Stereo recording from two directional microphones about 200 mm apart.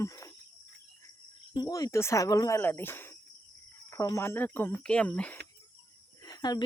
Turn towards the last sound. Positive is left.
turn(degrees=20)  # may be behind; listen again after turning